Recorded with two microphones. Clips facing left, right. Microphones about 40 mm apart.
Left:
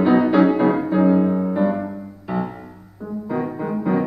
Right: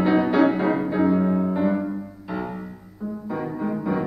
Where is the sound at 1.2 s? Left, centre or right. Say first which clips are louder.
Left 2 dB; centre.